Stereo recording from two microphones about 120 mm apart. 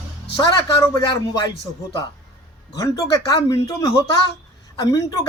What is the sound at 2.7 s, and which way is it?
Speech, 30° left (ahead or behind).